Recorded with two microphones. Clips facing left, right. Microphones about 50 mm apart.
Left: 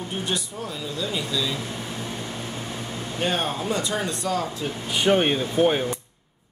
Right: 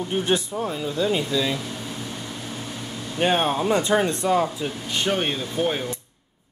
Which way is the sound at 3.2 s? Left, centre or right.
Right.